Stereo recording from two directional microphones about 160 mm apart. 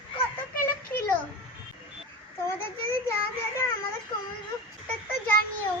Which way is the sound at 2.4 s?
15° left (ahead or behind).